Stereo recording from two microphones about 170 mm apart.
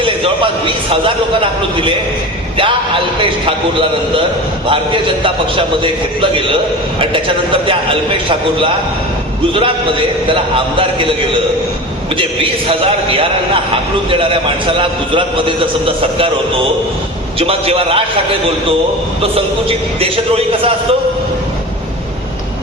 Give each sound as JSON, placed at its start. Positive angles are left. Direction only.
{"t": 0.0, "sound": "a man's voice", "side_deg": -30}
{"t": 3.2, "sound": "a man's voice", "side_deg": -30}
{"t": 7.7, "sound": "a man's voice", "side_deg": -30}
{"t": 12.1, "sound": "a man's voice", "side_deg": -30}
{"t": 17.4, "sound": "a man's voice", "side_deg": -35}